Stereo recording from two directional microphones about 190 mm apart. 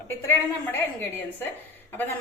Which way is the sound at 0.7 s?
10° left (ahead or behind).